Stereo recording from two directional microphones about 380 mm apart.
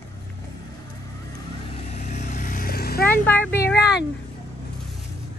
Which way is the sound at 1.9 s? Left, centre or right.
Centre.